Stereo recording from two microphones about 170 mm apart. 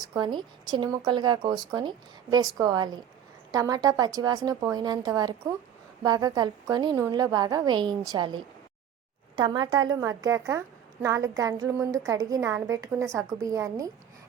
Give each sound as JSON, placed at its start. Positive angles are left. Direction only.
{"t": 0.0, "sound": "speech", "side_deg": -25}